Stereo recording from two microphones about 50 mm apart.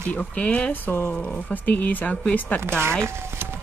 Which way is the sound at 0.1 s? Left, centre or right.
Left.